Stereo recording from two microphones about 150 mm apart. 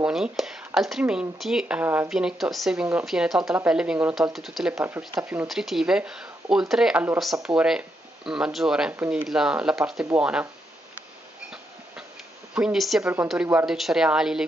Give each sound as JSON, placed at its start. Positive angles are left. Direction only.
{"t": 0.0, "sound": "speech", "side_deg": -5}
{"t": 5.5, "sound": "speech", "side_deg": 0}
{"t": 12.5, "sound": "speech", "side_deg": -5}
{"t": 13.0, "sound": "speech", "side_deg": -15}